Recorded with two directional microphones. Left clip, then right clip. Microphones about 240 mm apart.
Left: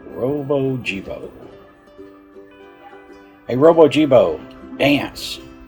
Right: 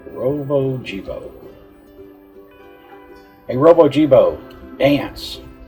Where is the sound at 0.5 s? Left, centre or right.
Left.